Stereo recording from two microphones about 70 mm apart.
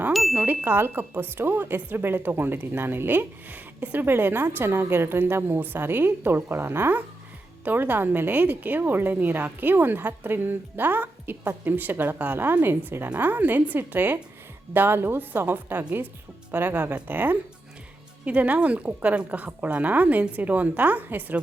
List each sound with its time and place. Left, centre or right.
0.1 s music: centre
0.4 s a woman's voice: right